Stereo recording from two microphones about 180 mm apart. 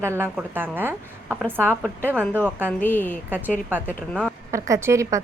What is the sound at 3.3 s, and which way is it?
A woman's voice, 10° right (ahead or behind).